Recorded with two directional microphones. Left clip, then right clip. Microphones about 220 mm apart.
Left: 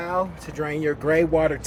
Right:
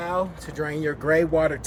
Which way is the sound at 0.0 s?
Centre (ahead or behind).